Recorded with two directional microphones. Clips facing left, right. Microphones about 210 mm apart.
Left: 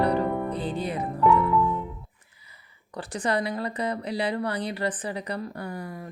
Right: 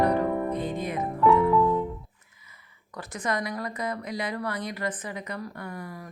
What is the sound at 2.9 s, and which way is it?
A woman's voice, 30° left (ahead or behind).